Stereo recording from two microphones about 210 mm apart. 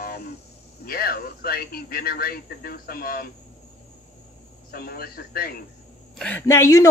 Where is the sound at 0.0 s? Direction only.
45° left (ahead or behind).